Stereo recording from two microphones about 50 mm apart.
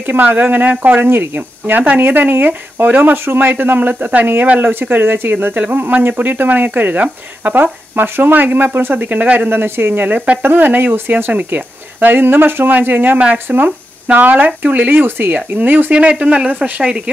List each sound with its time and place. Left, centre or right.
0.0 s speech: right
7.5 s speech: right
9.5 s speech: right
10.0 s speech: right
10.4 s speech: right
15.9 s speech: right